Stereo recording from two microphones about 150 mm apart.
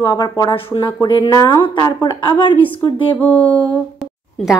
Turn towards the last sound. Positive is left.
turn(degrees=0)  # may be behind; listen again after turning